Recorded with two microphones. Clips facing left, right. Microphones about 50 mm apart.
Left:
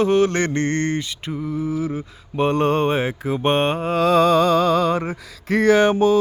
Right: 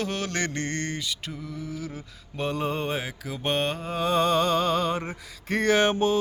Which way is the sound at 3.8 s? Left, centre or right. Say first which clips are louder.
Left 9 dB; left.